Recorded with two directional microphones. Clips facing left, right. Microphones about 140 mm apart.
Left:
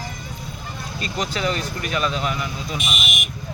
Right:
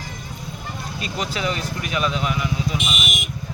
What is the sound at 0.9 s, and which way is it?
Speech, 5° right (ahead or behind).